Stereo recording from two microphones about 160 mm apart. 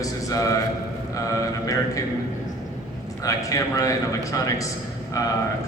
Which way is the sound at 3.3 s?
20° left (ahead or behind).